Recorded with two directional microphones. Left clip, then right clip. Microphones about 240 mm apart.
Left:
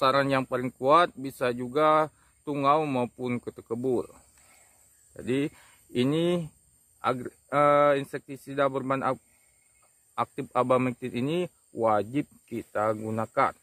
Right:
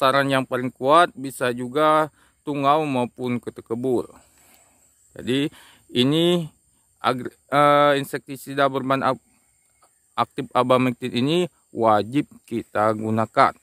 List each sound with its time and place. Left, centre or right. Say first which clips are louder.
0.0 s a man's voice: right 5 dB; right